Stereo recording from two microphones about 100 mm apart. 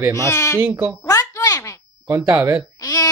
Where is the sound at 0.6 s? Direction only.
20° right (ahead or behind).